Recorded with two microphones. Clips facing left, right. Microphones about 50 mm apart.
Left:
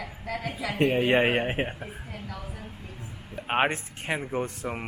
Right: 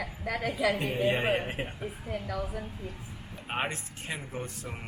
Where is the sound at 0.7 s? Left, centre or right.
Left.